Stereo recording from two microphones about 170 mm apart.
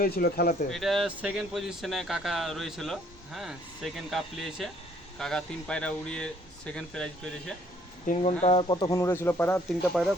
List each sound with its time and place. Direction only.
0.0 s speech: 65° left (ahead or behind)
0.7 s speech: centre (ahead or behind)
8.0 s speech: 45° left (ahead or behind); by 9.6 s 10° left (ahead or behind)
9.6 s speech: centre (ahead or behind)